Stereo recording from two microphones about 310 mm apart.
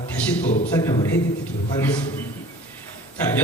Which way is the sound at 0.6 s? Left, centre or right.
Centre.